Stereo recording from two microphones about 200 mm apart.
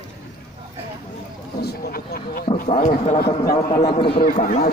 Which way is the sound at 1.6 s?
50° left (ahead or behind).